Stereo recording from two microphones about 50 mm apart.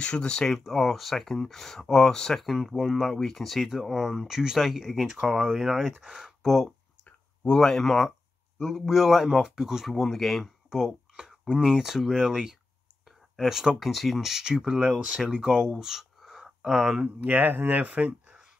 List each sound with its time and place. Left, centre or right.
0.0 s speech: centre
0.5 s speech: centre
2.4 s speech: centre
7.5 s speech: centre
10.7 s a sound: centre
11.5 s speech: centre
15.7 s a sound: centre
17.0 s speech: right